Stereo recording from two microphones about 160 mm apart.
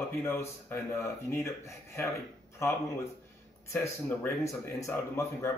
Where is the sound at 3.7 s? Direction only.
15° left (ahead or behind).